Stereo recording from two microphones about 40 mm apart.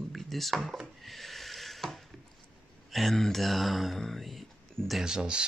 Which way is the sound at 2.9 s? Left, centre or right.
Centre.